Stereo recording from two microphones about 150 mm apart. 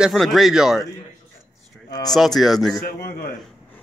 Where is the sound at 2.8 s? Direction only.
85° left.